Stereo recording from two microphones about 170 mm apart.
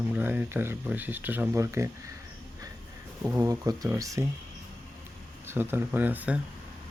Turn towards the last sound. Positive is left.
turn(degrees=-10)  # may be behind; listen again after turning